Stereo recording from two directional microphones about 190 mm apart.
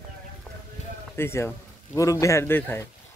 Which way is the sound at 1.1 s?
15° left (ahead or behind).